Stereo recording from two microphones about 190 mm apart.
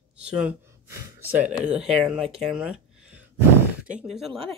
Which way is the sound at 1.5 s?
5° right (ahead or behind).